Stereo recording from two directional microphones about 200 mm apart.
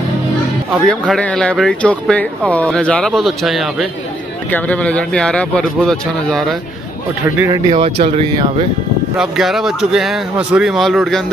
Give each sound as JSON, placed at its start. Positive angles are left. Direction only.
{"t": 0.8, "sound": "speech", "side_deg": 5}
{"t": 7.3, "sound": "speech", "side_deg": -15}
{"t": 7.7, "sound": "speech", "side_deg": -30}
{"t": 9.2, "sound": "speech", "side_deg": 0}